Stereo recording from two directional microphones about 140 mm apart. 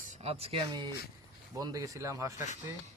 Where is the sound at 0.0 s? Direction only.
55° right (ahead or behind).